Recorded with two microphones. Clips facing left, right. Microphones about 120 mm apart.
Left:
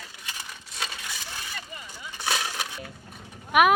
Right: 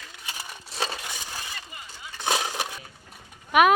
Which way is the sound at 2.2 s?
20° right (ahead or behind).